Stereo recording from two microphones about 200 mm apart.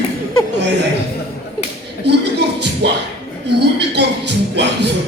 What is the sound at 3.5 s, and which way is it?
Speech, 55° right (ahead or behind).